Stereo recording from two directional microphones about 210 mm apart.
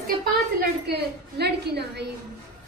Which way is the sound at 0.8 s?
50° right (ahead or behind).